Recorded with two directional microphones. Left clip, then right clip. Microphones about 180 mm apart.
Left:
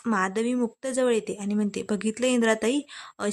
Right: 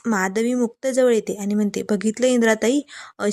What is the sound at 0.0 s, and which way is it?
Speech, 15° right (ahead or behind).